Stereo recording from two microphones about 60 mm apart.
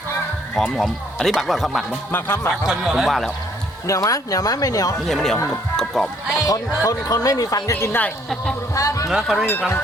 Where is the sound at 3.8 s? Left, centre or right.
Left.